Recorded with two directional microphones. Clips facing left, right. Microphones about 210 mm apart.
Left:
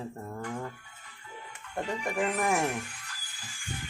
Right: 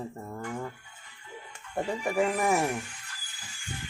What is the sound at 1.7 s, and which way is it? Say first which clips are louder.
Speech: right 4 dB; 5° right (ahead or behind).